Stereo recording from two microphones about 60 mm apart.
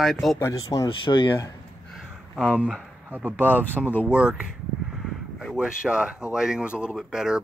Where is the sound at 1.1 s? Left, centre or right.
Left.